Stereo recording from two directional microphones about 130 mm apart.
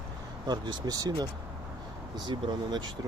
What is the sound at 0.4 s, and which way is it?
Speech, 35° right (ahead or behind).